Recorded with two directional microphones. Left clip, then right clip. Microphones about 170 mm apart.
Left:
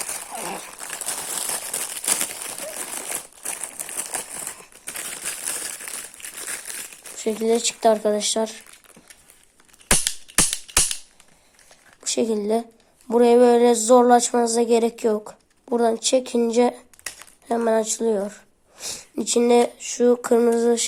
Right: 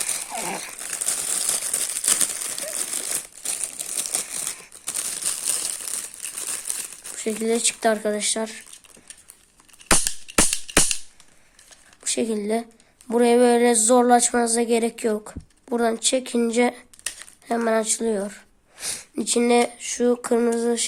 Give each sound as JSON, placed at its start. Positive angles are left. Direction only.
{"t": 0.3, "sound": "a sound", "side_deg": -20}
{"t": 1.5, "sound": "crumpling", "side_deg": -15}
{"t": 7.2, "sound": "speech", "side_deg": -5}
{"t": 12.0, "sound": "a woman's voice", "side_deg": -10}